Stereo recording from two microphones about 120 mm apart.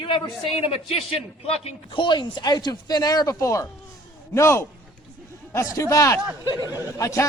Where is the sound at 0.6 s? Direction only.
55° left (ahead or behind).